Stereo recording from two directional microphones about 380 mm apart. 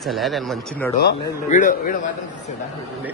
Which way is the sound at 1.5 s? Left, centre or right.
Centre.